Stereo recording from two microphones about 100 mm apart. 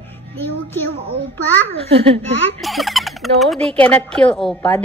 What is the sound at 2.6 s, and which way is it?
Speech, centre (ahead or behind).